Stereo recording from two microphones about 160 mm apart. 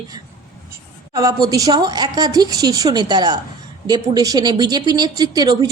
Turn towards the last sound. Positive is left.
turn(degrees=-25)  # may be behind; listen again after turning